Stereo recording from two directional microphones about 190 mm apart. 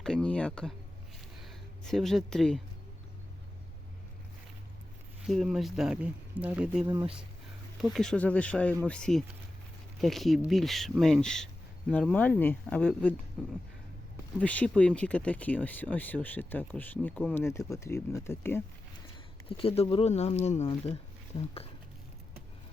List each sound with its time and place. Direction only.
0.0 s speech: 5° left (ahead or behind)
5.2 s speech: centre (ahead or behind)
7.9 s speech: 5° left (ahead or behind)
13.4 s speech: 5° right (ahead or behind)
14.3 s speech: 5° left (ahead or behind)
19.5 s speech: 30° left (ahead or behind)